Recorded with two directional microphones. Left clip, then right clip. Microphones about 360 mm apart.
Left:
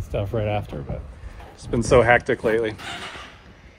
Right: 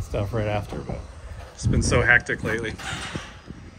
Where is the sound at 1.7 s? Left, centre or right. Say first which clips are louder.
Left 3 dB; centre.